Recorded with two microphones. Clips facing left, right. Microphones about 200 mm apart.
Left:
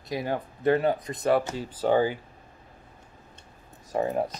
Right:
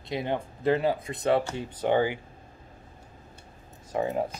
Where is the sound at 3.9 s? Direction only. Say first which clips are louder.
Left 1 dB; 35° left (ahead or behind).